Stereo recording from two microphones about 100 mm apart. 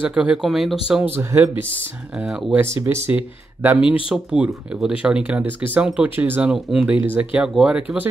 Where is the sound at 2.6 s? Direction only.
25° right (ahead or behind).